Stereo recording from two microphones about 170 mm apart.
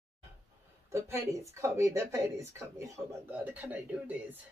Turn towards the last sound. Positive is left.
turn(degrees=-10)  # may be behind; listen again after turning